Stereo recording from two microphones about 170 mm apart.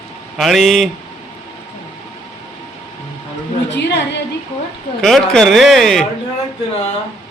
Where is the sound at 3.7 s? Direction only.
90° left.